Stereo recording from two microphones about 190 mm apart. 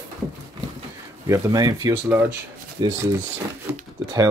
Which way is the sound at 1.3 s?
20° right (ahead or behind).